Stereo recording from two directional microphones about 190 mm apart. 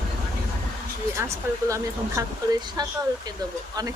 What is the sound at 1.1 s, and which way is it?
Speech, 15° right (ahead or behind).